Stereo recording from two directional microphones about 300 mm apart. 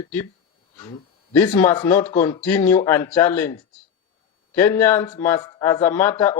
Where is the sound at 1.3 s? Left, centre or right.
Centre.